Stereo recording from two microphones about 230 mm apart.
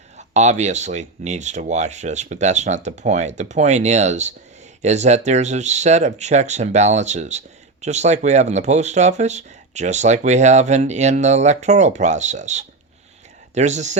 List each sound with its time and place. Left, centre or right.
0.2 s speech: right